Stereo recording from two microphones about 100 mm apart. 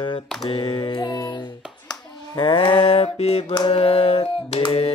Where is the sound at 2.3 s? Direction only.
60° left (ahead or behind); by 3.5 s 90° left.